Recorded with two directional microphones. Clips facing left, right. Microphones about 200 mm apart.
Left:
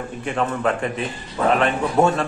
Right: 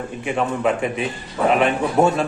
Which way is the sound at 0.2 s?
10° right (ahead or behind).